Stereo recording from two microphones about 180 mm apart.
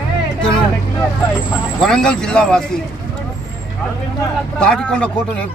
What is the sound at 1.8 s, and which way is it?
Speech, 5° left (ahead or behind).